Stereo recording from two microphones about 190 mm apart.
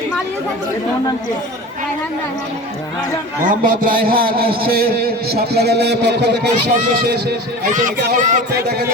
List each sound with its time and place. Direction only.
3.4 s a man's voice: 45° right (ahead or behind); by 6.5 s 60° right (ahead or behind)
7.7 s speech: 40° right (ahead or behind)
8.5 s speech: 60° right (ahead or behind)